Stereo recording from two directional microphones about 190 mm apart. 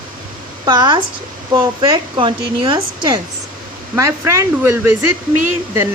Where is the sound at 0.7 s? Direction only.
25° right (ahead or behind).